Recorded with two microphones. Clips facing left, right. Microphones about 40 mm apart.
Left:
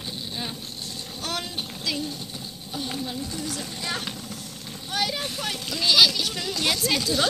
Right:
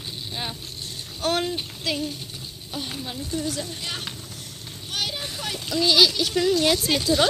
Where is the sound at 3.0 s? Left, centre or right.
Right.